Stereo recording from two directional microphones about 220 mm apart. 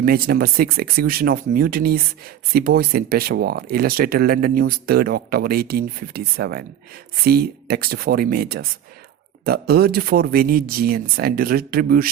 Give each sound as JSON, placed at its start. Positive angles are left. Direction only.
{"t": 0.0, "sound": "speech", "side_deg": -40}